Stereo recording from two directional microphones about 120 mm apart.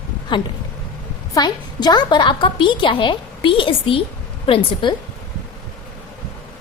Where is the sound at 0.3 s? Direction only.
40° left (ahead or behind).